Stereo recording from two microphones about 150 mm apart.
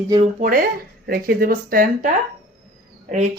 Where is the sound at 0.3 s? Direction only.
65° right (ahead or behind).